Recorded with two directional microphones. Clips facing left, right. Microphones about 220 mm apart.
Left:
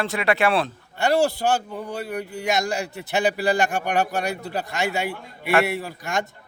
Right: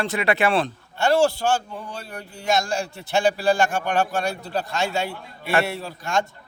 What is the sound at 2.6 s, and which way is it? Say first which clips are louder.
Speech: left 1 dB; 15° left (ahead or behind).